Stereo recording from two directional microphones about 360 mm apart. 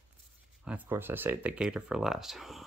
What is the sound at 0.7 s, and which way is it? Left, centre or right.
Speech, centre.